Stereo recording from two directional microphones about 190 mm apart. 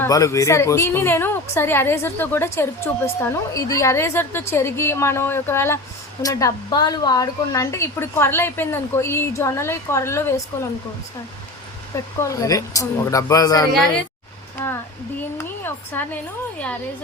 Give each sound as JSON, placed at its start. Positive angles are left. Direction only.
{"t": 0.0, "sound": "a woman's voice", "side_deg": 15}
{"t": 12.2, "sound": "a woman's voice", "side_deg": 15}
{"t": 15.4, "sound": "a woman's voice", "side_deg": 10}